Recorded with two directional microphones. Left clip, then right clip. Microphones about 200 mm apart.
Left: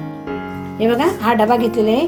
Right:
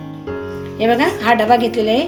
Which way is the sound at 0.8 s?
45° left (ahead or behind).